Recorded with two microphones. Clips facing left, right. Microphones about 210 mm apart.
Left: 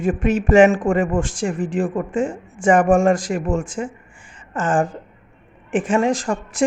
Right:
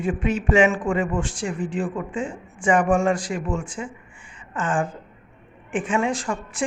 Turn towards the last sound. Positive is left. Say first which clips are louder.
# left 6 dB
turn(degrees=45)  # may be behind; listen again after turning